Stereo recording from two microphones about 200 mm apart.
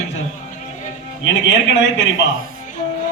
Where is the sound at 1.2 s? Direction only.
60° left (ahead or behind).